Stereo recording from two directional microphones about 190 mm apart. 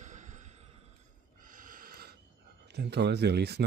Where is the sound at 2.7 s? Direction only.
60° right (ahead or behind).